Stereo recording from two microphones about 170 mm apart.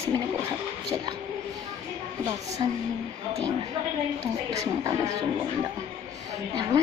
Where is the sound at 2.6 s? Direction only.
30° right (ahead or behind).